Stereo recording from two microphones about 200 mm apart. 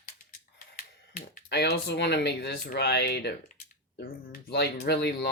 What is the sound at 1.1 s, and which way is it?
Speech, 45° left (ahead or behind).